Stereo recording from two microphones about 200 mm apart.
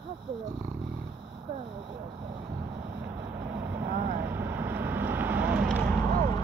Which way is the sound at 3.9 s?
50° right (ahead or behind).